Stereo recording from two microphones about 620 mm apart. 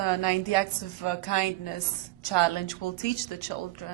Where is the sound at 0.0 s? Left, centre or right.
Left.